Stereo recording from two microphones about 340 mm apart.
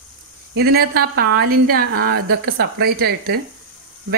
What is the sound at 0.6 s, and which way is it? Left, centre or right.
A woman's voice, right.